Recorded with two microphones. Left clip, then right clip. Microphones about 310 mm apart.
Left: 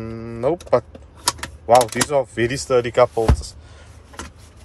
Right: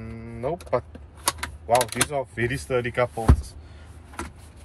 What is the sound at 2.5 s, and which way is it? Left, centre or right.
Mantra, left.